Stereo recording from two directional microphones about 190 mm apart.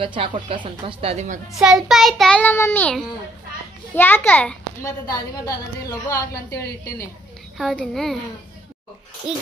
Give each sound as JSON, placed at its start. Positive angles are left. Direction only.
{"t": 0.0, "sound": "speech", "side_deg": -25}
{"t": 1.6, "sound": "child singing", "side_deg": 0}
{"t": 3.9, "sound": "a child's voice", "side_deg": 10}
{"t": 5.0, "sound": "a woman's voice", "side_deg": 20}
{"t": 7.5, "sound": "child singing", "side_deg": 0}
{"t": 9.3, "sound": "child singing", "side_deg": -5}